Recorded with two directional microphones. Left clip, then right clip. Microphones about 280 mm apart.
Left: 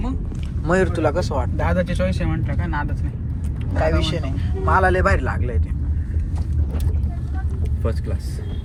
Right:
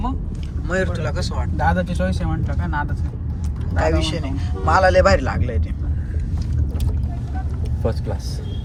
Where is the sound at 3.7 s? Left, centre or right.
Centre.